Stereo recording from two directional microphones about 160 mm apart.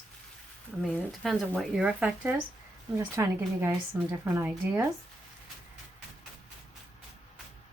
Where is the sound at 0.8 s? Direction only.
Centre (ahead or behind).